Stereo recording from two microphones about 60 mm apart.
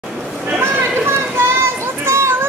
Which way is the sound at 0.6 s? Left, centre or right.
Right.